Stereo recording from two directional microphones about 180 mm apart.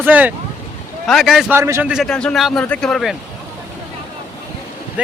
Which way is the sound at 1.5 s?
15° right (ahead or behind).